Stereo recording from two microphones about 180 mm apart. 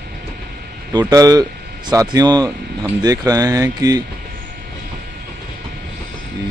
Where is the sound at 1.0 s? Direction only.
20° right (ahead or behind).